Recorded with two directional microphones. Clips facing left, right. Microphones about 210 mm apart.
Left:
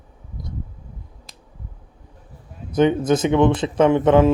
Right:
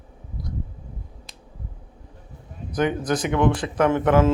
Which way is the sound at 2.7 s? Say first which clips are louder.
Left 6 dB; 25° left (ahead or behind).